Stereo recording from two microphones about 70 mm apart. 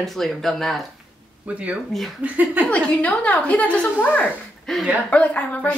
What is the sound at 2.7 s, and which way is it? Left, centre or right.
Speech, centre.